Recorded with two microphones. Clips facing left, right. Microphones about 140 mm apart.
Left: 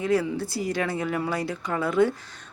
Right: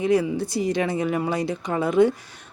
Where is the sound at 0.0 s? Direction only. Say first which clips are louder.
Right 3 dB; 20° right (ahead or behind).